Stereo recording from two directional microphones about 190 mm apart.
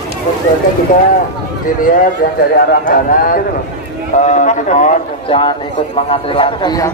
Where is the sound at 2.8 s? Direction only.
45° left (ahead or behind).